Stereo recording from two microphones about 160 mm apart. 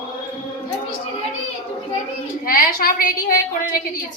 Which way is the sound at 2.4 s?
65° left (ahead or behind).